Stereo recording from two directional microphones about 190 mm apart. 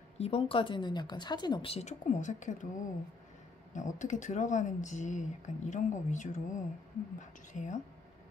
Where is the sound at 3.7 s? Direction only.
40° left (ahead or behind).